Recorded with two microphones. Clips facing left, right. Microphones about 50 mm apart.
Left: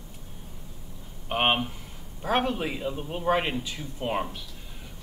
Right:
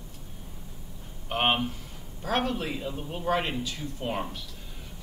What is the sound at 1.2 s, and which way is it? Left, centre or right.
A man's voice, centre.